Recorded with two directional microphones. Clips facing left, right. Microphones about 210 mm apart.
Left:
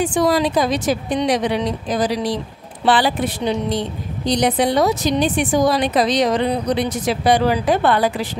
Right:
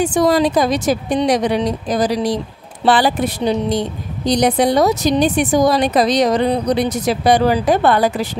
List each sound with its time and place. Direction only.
0.0 s a woman's voice: 45° right (ahead or behind)